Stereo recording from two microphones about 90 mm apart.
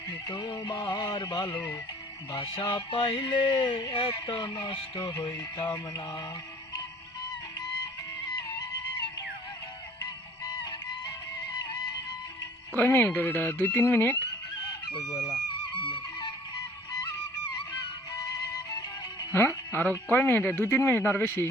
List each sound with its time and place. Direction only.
0.1 s speech: 50° left (ahead or behind)
2.3 s a sound: 55° left (ahead or behind)
3.1 s a sound: 70° left (ahead or behind)
4.0 s speech: 75° left (ahead or behind)
4.6 s speech: 55° left (ahead or behind)
10.4 s music: 45° left (ahead or behind)
12.7 s speech: 20° left (ahead or behind)
14.7 s chicken: 50° left (ahead or behind)
15.8 s music: 65° left (ahead or behind)
18.5 s music: 50° left (ahead or behind)
19.3 s speech: 30° left (ahead or behind)